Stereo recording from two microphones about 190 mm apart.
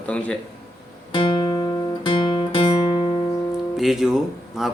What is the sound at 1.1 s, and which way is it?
Music, 25° left (ahead or behind).